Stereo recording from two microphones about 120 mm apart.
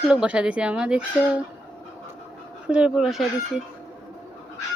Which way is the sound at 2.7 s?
10° right (ahead or behind).